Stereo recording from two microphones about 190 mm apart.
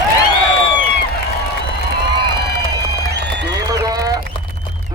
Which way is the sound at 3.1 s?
65° right (ahead or behind).